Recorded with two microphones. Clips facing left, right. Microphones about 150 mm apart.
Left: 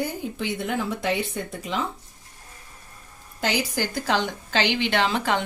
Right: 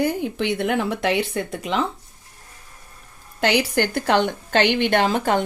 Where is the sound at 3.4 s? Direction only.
70° right (ahead or behind).